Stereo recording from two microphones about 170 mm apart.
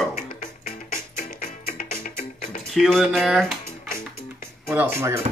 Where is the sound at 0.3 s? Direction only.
55° left (ahead or behind).